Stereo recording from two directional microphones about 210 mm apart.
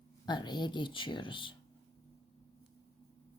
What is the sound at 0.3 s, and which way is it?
Speech, 20° left (ahead or behind).